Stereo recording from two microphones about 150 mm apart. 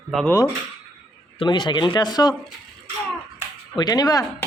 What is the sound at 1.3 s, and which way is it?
Speech, 30° left (ahead or behind).